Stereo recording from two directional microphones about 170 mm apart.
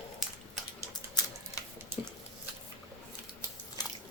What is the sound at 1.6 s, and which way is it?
Water tap, 20° left (ahead or behind).